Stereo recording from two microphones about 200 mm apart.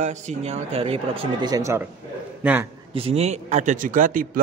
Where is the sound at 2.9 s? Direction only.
30° right (ahead or behind).